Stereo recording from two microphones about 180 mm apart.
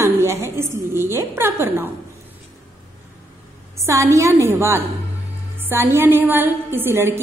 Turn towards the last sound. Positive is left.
turn(degrees=-15)  # may be behind; listen again after turning